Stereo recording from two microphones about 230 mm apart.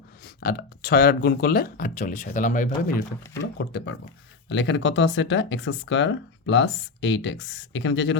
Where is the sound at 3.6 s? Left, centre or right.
Left.